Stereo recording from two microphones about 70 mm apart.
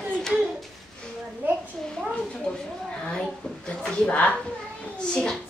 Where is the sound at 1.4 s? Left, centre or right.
Right.